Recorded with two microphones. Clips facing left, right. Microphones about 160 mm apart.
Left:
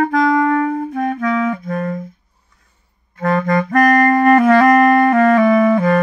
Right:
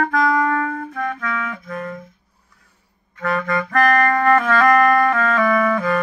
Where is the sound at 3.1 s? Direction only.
35° left (ahead or behind).